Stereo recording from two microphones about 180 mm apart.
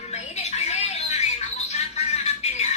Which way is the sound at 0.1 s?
35° left (ahead or behind).